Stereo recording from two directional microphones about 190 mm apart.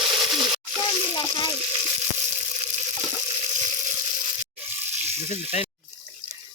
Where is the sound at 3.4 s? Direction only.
35° right (ahead or behind).